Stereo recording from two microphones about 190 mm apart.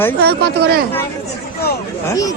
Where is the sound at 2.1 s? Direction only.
20° left (ahead or behind).